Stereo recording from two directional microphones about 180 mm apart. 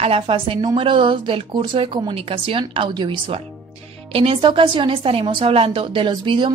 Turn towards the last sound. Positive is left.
turn(degrees=-25)  # may be behind; listen again after turning